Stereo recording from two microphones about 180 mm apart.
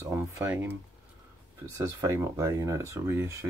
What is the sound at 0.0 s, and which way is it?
Speech, 15° right (ahead or behind).